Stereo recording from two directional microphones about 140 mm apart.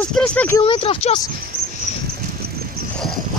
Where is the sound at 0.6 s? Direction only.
40° left (ahead or behind).